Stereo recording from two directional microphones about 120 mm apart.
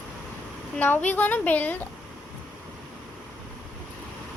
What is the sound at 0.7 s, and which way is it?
A woman's voice, 15° left (ahead or behind).